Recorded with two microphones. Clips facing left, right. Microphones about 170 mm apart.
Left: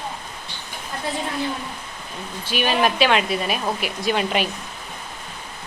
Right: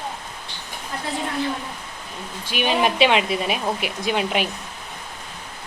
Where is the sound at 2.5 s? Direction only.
20° right (ahead or behind).